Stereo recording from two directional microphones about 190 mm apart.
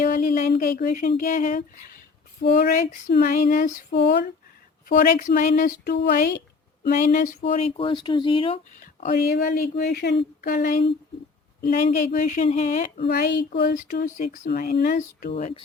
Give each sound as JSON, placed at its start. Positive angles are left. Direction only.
{"t": 0.0, "sound": "speech", "side_deg": 50}
{"t": 2.4, "sound": "a sound", "side_deg": 60}
{"t": 4.9, "sound": "speech", "side_deg": 45}
{"t": 7.5, "sound": "speech", "side_deg": 30}
{"t": 8.8, "sound": "speech", "side_deg": 45}
{"t": 13.0, "sound": "a sound", "side_deg": 60}
{"t": 13.7, "sound": "speech", "side_deg": 45}
{"t": 15.3, "sound": "speech", "side_deg": 35}